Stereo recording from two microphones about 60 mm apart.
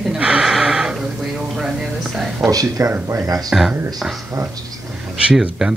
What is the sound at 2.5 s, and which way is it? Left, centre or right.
Speech, right.